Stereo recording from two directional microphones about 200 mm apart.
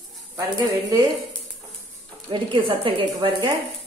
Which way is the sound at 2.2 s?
25° right (ahead or behind).